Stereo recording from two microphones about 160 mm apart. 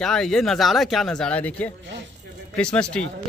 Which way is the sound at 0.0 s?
5° left (ahead or behind).